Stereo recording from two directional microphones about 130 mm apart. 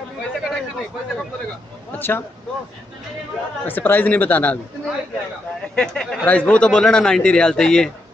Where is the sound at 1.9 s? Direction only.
15° left (ahead or behind).